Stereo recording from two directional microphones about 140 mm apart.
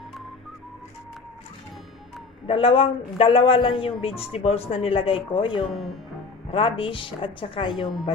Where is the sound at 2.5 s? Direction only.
40° left (ahead or behind).